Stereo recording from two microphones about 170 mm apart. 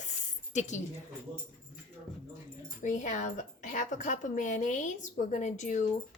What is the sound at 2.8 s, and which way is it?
A woman's voice, 45° left (ahead or behind).